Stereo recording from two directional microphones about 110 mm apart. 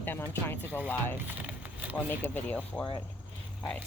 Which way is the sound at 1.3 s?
15° right (ahead or behind).